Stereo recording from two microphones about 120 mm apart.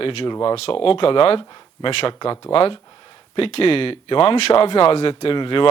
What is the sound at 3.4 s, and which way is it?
Speech, 55° left (ahead or behind).